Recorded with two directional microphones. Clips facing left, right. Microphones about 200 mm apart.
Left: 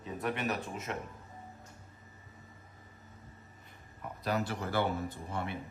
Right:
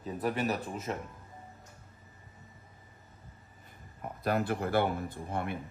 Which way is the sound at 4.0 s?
55° right (ahead or behind).